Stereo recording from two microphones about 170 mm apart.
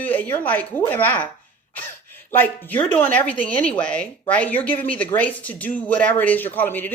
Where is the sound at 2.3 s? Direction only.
10° left (ahead or behind).